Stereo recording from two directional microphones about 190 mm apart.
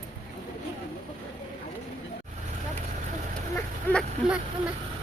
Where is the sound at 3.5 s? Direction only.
5° left (ahead or behind).